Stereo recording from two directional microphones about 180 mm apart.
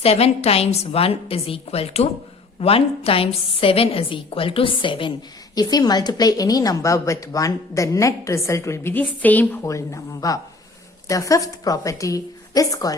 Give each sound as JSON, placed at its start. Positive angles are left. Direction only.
{"t": 0.0, "sound": "a woman's voice", "side_deg": 35}